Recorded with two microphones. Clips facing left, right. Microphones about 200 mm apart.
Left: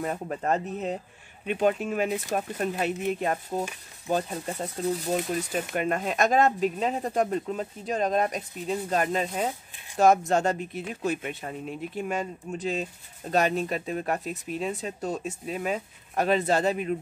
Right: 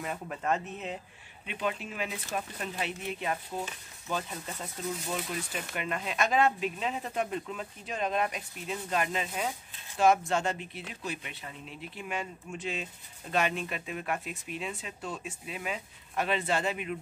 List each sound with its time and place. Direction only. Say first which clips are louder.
0.0 s speech: left 5 dB; 40° left (ahead or behind)